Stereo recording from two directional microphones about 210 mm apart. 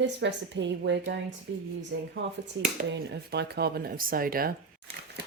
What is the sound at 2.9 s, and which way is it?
Speech, 55° right (ahead or behind).